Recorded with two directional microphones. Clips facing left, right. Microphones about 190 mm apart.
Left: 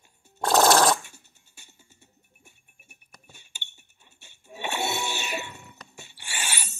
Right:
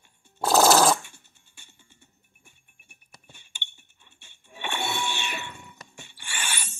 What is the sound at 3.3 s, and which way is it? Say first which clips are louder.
Chink: right 2 dB; 40° left (ahead or behind).